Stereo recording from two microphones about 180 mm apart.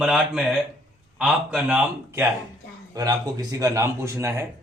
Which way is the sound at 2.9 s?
20° right (ahead or behind).